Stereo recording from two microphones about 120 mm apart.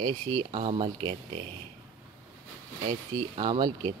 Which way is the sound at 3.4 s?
40° right (ahead or behind).